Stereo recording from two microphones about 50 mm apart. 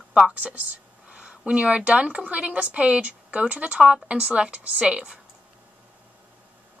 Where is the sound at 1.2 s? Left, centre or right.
Right.